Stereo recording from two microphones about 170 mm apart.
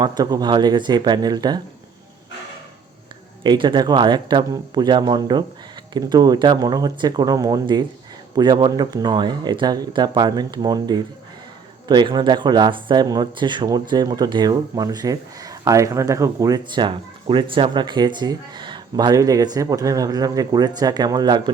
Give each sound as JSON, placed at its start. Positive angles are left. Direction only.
{"t": 0.0, "sound": "speech", "side_deg": -25}
{"t": 3.4, "sound": "speech", "side_deg": -25}